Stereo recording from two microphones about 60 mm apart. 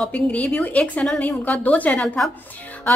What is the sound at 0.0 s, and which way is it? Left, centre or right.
A woman's voice, centre.